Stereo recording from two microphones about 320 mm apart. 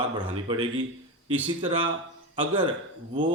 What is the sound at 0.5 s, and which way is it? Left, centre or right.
A man's voice, centre.